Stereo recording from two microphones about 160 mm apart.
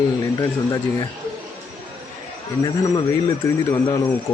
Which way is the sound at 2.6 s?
25° left (ahead or behind).